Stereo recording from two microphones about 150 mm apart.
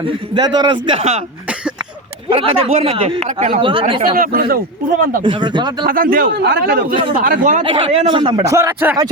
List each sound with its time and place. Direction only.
0.3 s speech: 30° right (ahead or behind)
2.3 s speech: 40° right (ahead or behind)
4.0 s speech: 75° right (ahead or behind)
5.2 s speech: 30° right (ahead or behind)
5.8 s a man's voice: 75° right (ahead or behind); by 6.8 s 90° right
7.2 s speech: 65° right (ahead or behind)
7.6 s speech: 35° right (ahead or behind)
8.3 s a man's voice: 20° right (ahead or behind)